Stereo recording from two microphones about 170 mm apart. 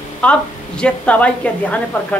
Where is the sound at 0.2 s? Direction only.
5° left (ahead or behind).